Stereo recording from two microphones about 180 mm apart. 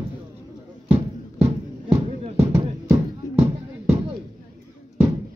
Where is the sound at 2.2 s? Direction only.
35° right (ahead or behind).